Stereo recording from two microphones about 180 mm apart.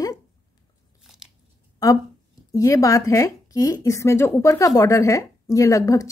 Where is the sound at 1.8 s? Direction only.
20° left (ahead or behind).